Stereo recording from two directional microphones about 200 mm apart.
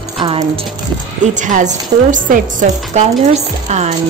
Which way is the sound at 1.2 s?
40° right (ahead or behind).